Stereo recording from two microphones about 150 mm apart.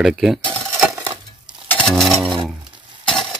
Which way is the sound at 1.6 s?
5° left (ahead or behind).